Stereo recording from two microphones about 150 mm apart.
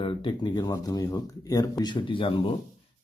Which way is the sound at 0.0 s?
35° left (ahead or behind).